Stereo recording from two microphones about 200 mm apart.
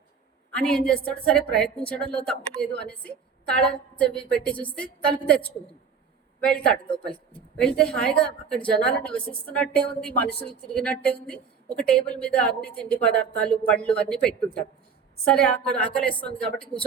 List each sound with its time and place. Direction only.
0.5 s a woman's voice: 5° left (ahead or behind)
6.8 s speech: 25° left (ahead or behind)
7.5 s a woman's voice: 5° left (ahead or behind)